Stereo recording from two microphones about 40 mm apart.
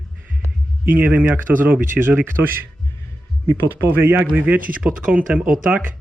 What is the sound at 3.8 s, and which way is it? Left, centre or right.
Speech, right.